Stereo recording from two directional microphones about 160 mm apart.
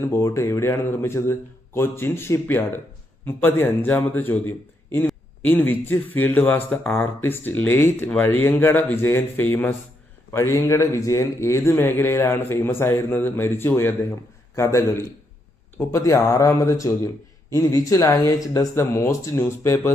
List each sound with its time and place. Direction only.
0.0 s a man's voice: 15° left (ahead or behind)